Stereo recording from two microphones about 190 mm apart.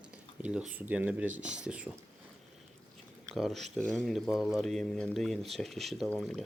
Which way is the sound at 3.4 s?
Centre (ahead or behind).